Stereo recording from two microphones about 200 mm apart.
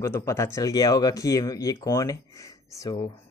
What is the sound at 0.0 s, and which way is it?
Speech, 15° left (ahead or behind).